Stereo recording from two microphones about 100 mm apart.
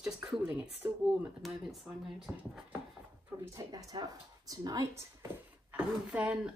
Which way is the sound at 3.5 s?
35° right (ahead or behind).